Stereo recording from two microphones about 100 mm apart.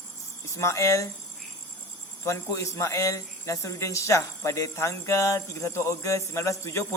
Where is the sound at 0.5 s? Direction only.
30° left (ahead or behind).